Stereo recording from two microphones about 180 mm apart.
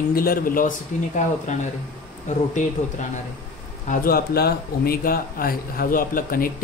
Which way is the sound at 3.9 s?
55° left (ahead or behind).